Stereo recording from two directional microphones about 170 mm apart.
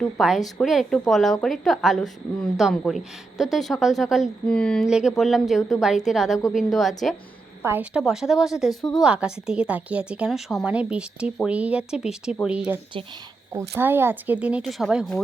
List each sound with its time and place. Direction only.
0.0 s a woman's voice: centre (ahead or behind)
7.6 s a woman's voice: 10° right (ahead or behind)
8.7 s speech: 20° left (ahead or behind)
9.0 s a woman's voice: 5° right (ahead or behind)